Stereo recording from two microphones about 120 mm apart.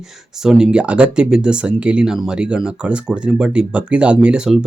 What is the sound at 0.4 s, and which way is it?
Speech, 5° right (ahead or behind).